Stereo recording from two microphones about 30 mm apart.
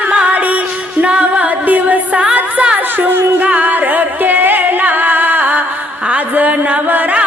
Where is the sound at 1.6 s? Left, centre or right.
Right.